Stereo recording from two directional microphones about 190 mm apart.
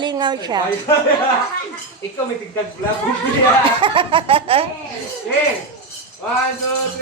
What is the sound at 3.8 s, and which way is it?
Speech, 25° right (ahead or behind).